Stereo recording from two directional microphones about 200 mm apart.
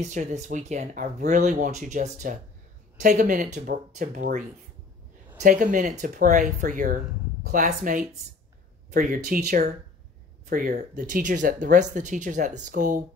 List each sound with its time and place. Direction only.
0.0 s speech: 35° right (ahead or behind)
5.4 s speech: 40° right (ahead or behind)